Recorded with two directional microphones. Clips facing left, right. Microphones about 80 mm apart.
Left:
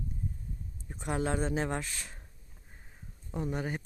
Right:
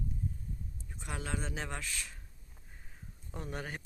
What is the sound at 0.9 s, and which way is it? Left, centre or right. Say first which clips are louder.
Speech: left 8 dB; left.